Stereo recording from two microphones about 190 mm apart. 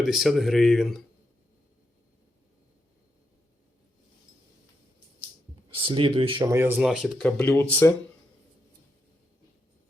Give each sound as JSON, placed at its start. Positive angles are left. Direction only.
{"t": 0.0, "sound": "speech", "side_deg": 0}
{"t": 5.7, "sound": "speech", "side_deg": -25}
{"t": 6.4, "sound": "speech", "side_deg": -10}